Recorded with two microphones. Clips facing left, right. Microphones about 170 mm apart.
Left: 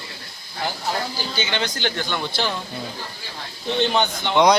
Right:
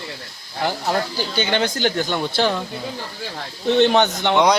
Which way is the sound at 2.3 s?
50° right (ahead or behind).